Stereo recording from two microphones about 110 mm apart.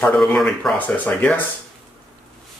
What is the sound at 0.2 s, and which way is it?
Speech, 5° left (ahead or behind).